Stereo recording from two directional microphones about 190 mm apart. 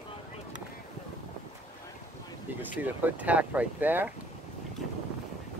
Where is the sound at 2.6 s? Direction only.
10° right (ahead or behind).